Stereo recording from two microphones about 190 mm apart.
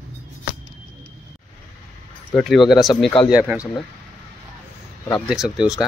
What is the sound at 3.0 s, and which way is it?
Speech, 25° left (ahead or behind).